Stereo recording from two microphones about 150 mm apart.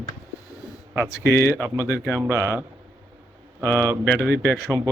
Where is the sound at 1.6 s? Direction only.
20° right (ahead or behind).